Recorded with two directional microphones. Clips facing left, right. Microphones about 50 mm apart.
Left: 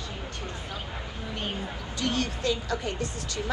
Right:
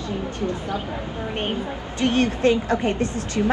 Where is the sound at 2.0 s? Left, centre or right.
Right.